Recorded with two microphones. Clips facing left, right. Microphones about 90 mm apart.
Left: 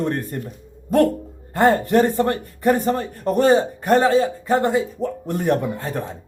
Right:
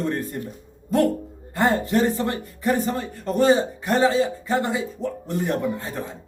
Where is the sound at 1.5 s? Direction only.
50° left (ahead or behind).